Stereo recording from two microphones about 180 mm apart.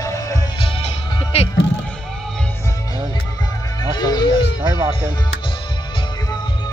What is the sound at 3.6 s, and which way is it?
Music, 20° left (ahead or behind).